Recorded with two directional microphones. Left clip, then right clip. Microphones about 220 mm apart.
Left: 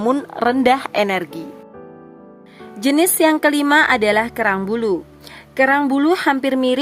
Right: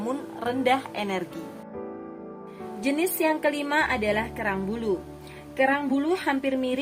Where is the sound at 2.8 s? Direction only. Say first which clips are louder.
Left 10 dB; 50° left (ahead or behind).